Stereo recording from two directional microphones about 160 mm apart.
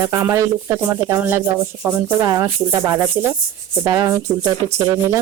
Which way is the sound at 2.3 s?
20° right (ahead or behind).